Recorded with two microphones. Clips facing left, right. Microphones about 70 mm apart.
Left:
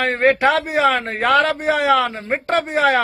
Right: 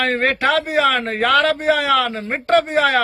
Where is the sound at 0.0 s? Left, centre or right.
Centre.